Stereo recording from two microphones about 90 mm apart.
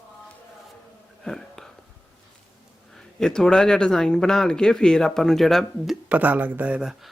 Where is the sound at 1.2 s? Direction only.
5° left (ahead or behind).